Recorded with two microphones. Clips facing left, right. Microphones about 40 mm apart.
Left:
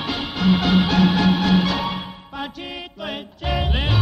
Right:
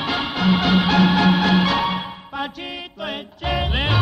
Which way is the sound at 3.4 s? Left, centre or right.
Right.